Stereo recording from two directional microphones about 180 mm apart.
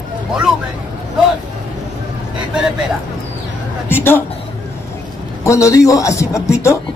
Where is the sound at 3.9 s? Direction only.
10° left (ahead or behind).